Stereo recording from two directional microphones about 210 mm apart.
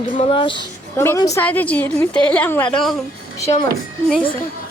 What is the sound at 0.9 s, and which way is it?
A woman's voice, 15° left (ahead or behind).